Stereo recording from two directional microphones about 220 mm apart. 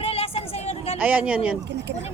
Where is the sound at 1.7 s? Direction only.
50° right (ahead or behind).